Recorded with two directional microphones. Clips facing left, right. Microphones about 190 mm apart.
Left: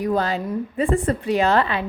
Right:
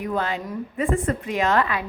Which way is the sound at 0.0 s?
35° left (ahead or behind).